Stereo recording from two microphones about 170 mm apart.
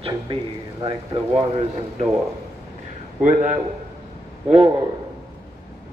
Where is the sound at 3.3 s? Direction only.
45° right (ahead or behind).